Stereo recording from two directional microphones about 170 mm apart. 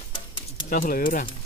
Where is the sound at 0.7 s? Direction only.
55° left (ahead or behind).